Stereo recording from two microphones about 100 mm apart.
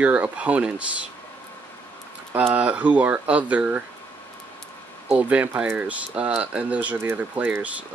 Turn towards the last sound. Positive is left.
turn(degrees=-15)  # may be behind; listen again after turning